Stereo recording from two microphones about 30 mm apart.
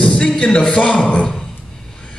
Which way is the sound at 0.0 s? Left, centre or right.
Left.